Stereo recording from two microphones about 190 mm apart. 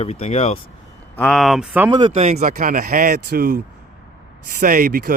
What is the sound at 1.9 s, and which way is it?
Speech, 25° right (ahead or behind).